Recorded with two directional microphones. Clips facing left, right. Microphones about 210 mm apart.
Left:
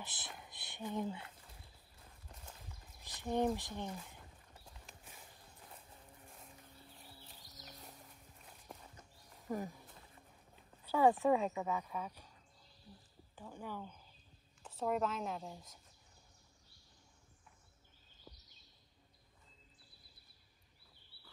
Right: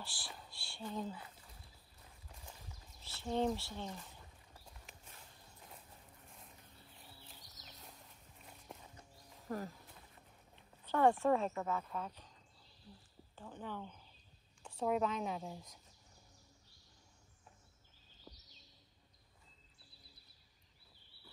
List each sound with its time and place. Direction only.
0.0 s speech: 20° left (ahead or behind)
0.4 s a sound: 20° left (ahead or behind)
3.0 s speech: 15° left (ahead or behind)
8.7 s a sound: centre (ahead or behind)
9.5 s speech: 15° left (ahead or behind)
11.1 s speech: 15° left (ahead or behind)
13.4 s a woman's voice: 10° left (ahead or behind)